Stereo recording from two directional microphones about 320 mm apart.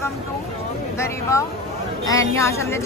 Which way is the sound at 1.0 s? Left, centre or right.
Centre.